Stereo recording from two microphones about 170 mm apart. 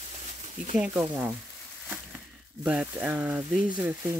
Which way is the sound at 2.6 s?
5° right (ahead or behind).